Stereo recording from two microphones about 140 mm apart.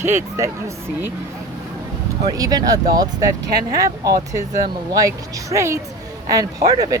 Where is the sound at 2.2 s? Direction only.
25° right (ahead or behind).